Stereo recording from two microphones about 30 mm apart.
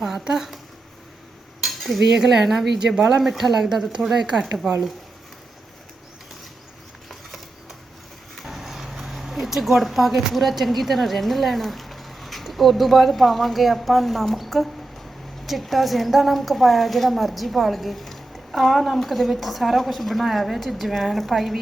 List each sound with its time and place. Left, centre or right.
0.0 s a sound: centre
1.6 s cutlery: centre
2.1 s speech: centre
2.7 s speech: right
3.2 s speech: centre
7.1 s a sound: centre
8.4 s a woman's voice: centre